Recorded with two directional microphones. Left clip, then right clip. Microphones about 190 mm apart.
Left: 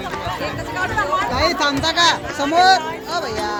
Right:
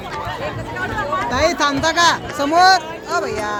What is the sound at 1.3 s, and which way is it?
Speech, 35° right (ahead or behind).